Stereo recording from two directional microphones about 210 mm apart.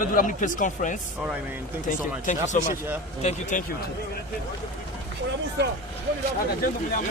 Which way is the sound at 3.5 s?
40° left (ahead or behind).